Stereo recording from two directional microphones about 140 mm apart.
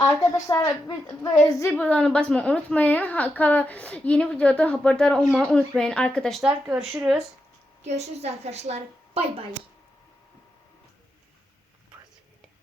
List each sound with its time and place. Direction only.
0.0 s a woman's voice: 25° left (ahead or behind)
1.7 s a woman's voice: 10° left (ahead or behind); by 7.2 s 5° right (ahead or behind)
7.9 s a woman's voice: 50° right (ahead or behind)